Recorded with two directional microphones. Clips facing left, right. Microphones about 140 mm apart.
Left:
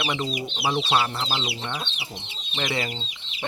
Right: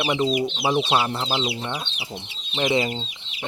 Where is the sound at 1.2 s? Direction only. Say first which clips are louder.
Right 4 dB; 10° right (ahead or behind).